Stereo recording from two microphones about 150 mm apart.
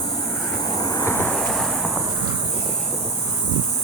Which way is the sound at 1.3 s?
Centre (ahead or behind).